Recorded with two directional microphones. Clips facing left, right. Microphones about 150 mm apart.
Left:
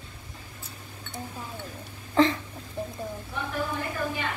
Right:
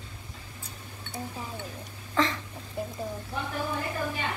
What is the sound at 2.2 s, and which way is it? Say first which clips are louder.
Speech: left 6 dB; 35° left (ahead or behind).